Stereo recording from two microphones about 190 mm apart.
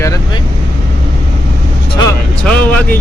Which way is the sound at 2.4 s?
5° left (ahead or behind).